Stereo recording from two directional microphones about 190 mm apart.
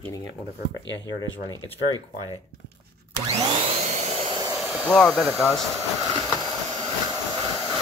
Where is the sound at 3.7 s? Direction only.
35° right (ahead or behind).